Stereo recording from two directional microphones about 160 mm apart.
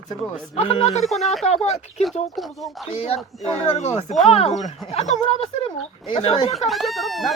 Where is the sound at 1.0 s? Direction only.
Centre (ahead or behind).